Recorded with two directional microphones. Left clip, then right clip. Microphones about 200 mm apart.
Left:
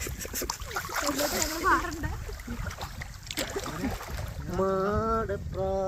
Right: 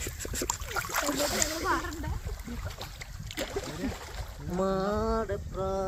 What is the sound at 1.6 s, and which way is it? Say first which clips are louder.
Boat: left 5 dB; 55° left (ahead or behind).